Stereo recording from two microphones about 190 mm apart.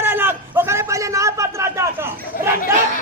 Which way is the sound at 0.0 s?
10° right (ahead or behind).